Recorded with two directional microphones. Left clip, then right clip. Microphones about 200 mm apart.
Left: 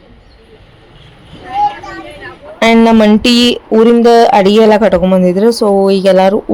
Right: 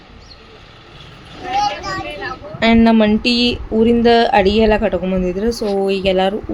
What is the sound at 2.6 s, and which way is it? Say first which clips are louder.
Speech: left 6 dB; 35° left (ahead or behind).